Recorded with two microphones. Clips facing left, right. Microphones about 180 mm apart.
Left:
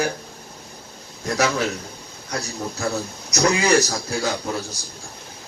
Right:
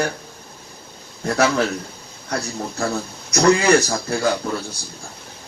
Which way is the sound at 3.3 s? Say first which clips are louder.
Right 4 dB; 55° right (ahead or behind).